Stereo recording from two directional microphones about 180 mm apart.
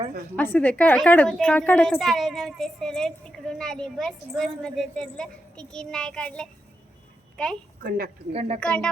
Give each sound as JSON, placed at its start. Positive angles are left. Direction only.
{"t": 0.3, "sound": "a woman's voice", "side_deg": 10}
{"t": 7.8, "sound": "a woman's voice", "side_deg": -55}
{"t": 8.3, "sound": "a woman's voice", "side_deg": -35}
{"t": 8.6, "sound": "a woman's voice", "side_deg": 5}